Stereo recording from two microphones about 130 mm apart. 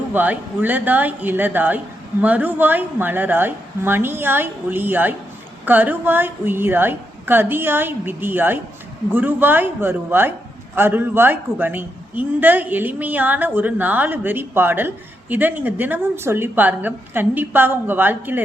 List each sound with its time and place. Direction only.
0.1 s a woman's voice: 10° right (ahead or behind)